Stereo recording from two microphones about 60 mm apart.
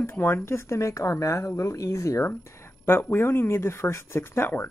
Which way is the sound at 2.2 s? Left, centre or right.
Left.